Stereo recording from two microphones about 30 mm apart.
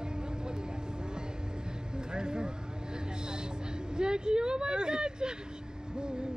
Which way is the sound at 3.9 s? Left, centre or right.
Right.